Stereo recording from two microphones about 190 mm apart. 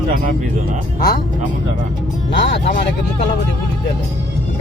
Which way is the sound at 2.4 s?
65° left (ahead or behind).